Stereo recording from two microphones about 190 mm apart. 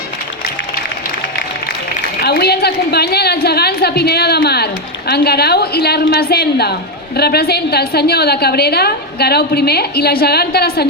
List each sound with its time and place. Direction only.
2.2 s a woman's voice: 55° left (ahead or behind)